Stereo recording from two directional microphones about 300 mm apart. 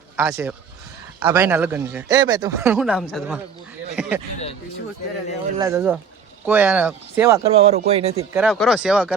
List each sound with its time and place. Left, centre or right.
0.2 s speech: centre
5.5 s speech: centre
7.6 s speech: centre
8.3 s speech: centre